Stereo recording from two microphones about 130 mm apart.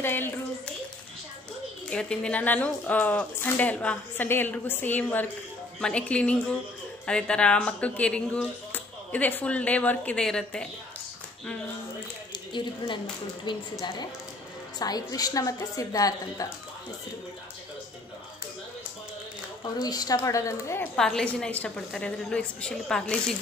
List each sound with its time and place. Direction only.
0.0 s a child's voice: 15° left (ahead or behind)
1.9 s speech: 5° left (ahead or behind)
12.5 s a woman's voice: 35° left (ahead or behind)
19.6 s a woman's voice: 30° left (ahead or behind)
20.9 s speech: 5° left (ahead or behind)